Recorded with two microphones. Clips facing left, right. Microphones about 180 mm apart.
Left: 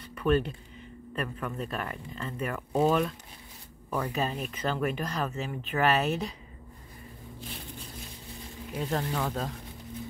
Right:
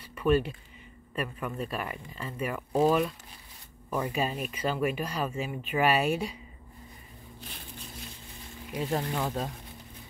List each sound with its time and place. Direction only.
0.0 s a sound: 10° right (ahead or behind)
1.1 s speech: 10° right (ahead or behind)
8.7 s speech: 15° right (ahead or behind)